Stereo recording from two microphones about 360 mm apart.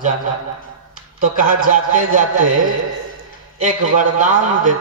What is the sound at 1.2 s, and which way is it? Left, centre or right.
A man's voice, right.